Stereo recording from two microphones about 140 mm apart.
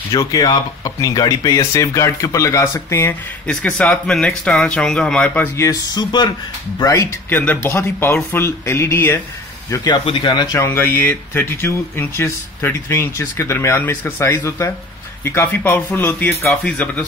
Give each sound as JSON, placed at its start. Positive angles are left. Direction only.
{"t": 0.1, "sound": "speech", "side_deg": 25}
{"t": 3.4, "sound": "speech", "side_deg": 10}
{"t": 5.7, "sound": "speech", "side_deg": 30}
{"t": 7.2, "sound": "speech", "side_deg": 15}
{"t": 9.7, "sound": "speech", "side_deg": 30}